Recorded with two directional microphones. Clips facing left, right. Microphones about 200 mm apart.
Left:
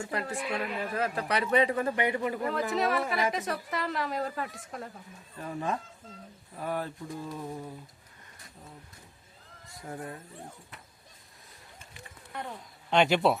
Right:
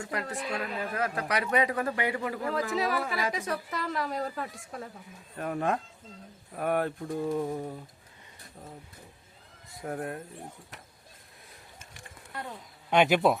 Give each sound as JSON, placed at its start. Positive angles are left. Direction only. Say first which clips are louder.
{"t": 0.0, "sound": "a man's voice", "louder": "left 1 dB", "side_deg": 25}
{"t": 0.3, "sound": "speech", "louder": "left 1 dB", "side_deg": 10}
{"t": 0.9, "sound": "a man's voice", "louder": "left 1 dB", "side_deg": 30}
{"t": 2.4, "sound": "a woman's voice", "louder": "right 1 dB", "side_deg": 0}
{"t": 5.4, "sound": "a sound", "louder": "right 4 dB", "side_deg": -60}
{"t": 9.6, "sound": "speech", "louder": "right 5 dB", "side_deg": -60}
{"t": 12.3, "sound": "speech", "louder": "left 1 dB", "side_deg": 0}